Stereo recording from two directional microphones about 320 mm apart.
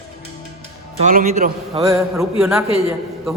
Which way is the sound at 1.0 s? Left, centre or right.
Right.